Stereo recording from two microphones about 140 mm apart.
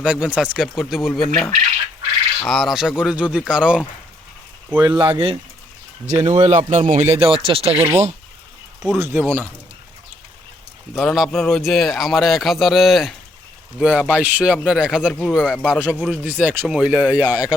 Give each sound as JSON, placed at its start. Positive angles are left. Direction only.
{"t": 0.0, "sound": "a man's voice", "side_deg": -10}
{"t": 4.8, "sound": "speech", "side_deg": -30}
{"t": 6.1, "sound": "speech", "side_deg": -55}
{"t": 7.7, "sound": "speech", "side_deg": -10}
{"t": 9.0, "sound": "speech", "side_deg": -15}
{"t": 10.9, "sound": "a man's voice", "side_deg": 0}